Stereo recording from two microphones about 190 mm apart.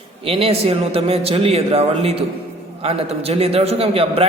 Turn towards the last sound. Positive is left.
turn(degrees=-30)  # may be behind; listen again after turning